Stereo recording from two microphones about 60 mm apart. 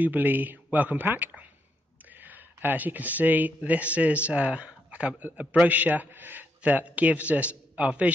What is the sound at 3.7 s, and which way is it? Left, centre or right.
A man's voice, right.